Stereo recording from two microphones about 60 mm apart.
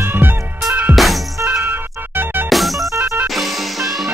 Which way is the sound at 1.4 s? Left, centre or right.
Right.